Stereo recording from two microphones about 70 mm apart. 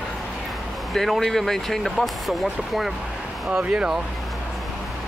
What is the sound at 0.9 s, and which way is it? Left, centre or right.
Speech, centre.